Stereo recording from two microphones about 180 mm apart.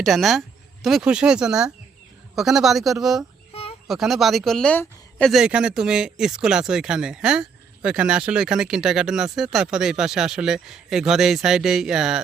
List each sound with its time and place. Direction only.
0.0 s speech: centre (ahead or behind)
3.5 s a sound: 35° left (ahead or behind)
3.8 s speech: centre (ahead or behind)